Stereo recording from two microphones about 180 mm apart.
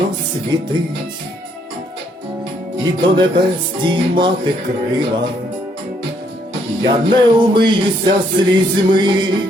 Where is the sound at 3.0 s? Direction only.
25° right (ahead or behind).